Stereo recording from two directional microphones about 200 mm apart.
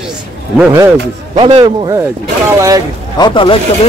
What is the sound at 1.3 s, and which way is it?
A man's voice, 25° right (ahead or behind).